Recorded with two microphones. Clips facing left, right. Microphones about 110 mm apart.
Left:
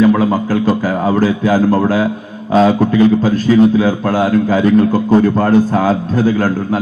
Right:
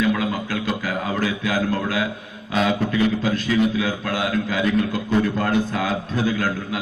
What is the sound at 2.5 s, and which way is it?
A man's voice, 40° left (ahead or behind).